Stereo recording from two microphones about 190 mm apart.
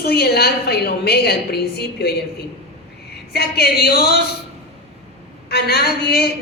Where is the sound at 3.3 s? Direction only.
55° left (ahead or behind).